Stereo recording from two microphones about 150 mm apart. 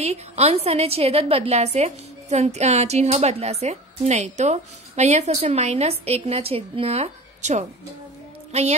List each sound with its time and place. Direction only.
0.0 s a woman's voice: 45° right (ahead or behind)